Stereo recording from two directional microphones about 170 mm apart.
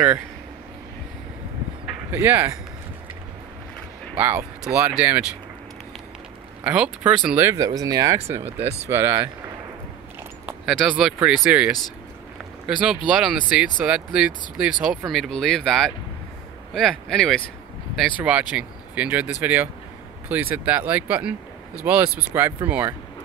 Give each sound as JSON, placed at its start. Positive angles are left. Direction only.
{"t": 2.0, "sound": "speech", "side_deg": -10}
{"t": 4.2, "sound": "speech", "side_deg": -10}
{"t": 6.6, "sound": "speech", "side_deg": -10}
{"t": 8.5, "sound": "speech", "side_deg": -35}
{"t": 8.8, "sound": "speech", "side_deg": -15}
{"t": 10.4, "sound": "speech", "side_deg": -5}